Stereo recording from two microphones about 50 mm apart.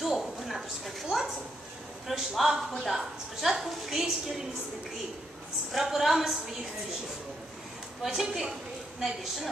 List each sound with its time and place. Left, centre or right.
0.0 s a sound: centre
2.0 s a woman's voice: centre
5.7 s a woman's voice: centre
8.0 s a woman's voice: centre